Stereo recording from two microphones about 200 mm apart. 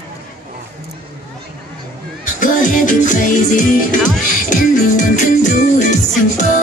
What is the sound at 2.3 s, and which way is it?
Music, 40° left (ahead or behind).